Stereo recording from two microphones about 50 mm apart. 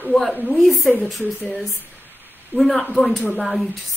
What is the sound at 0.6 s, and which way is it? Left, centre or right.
Speech, centre.